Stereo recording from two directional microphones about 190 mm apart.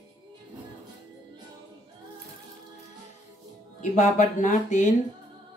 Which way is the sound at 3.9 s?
40° left (ahead or behind).